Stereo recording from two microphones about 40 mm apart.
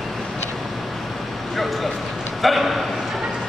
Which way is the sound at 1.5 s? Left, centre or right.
Centre.